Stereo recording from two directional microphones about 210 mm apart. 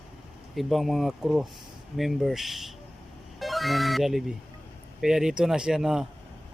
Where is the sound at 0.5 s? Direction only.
Centre (ahead or behind).